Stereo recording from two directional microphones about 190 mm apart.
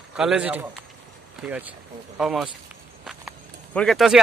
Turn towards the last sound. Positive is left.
turn(degrees=0)  # may be behind; listen again after turning